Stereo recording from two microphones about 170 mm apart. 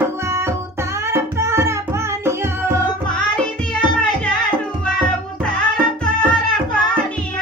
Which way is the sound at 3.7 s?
5° left (ahead or behind).